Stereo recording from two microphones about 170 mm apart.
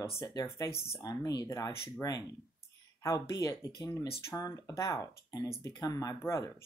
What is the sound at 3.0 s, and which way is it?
Speech, 20° left (ahead or behind).